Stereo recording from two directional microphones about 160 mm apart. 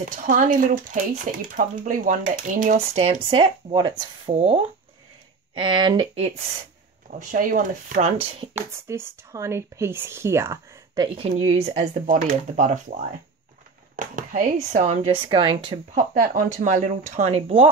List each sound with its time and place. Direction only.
0.3 s speech: 55° right (ahead or behind)
3.3 s speech: 30° right (ahead or behind)
7.1 s speech: 55° right (ahead or behind)
8.5 s speech: 15° right (ahead or behind)
11.1 s speech: 35° right (ahead or behind)
12.1 s speech: 55° right (ahead or behind)
13.9 s speech: 55° right (ahead or behind); by 15.8 s 35° right (ahead or behind)
15.9 s speech: 55° right (ahead or behind); by 17.6 s 40° right (ahead or behind)